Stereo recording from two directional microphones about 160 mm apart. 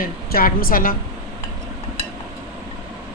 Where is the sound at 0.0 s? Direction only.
65° left (ahead or behind).